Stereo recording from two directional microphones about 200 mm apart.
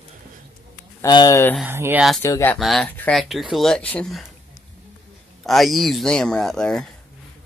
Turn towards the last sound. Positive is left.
turn(degrees=5)  # may be behind; listen again after turning